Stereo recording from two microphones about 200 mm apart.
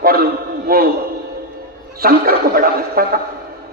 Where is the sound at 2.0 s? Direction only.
50° right (ahead or behind).